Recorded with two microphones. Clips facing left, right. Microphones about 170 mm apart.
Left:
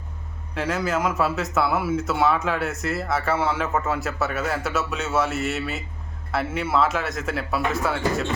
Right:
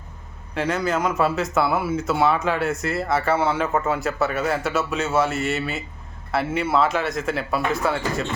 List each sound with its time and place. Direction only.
0.5 s speech: centre (ahead or behind)